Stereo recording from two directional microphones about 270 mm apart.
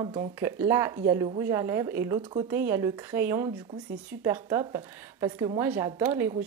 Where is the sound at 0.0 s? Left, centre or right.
Centre.